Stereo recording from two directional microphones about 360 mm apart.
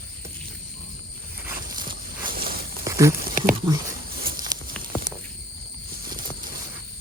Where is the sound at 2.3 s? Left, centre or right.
Right.